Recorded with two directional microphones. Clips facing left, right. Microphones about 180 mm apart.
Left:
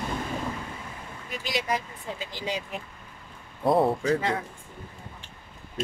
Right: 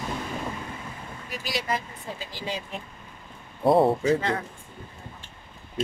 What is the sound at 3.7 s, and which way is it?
Speech, 30° right (ahead or behind).